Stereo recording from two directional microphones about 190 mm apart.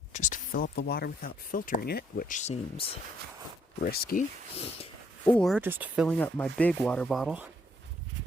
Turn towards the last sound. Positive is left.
turn(degrees=-5)  # may be behind; listen again after turning